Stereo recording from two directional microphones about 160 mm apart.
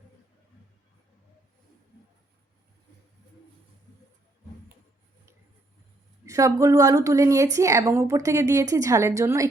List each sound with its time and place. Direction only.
6.2 s a woman's voice: 20° right (ahead or behind)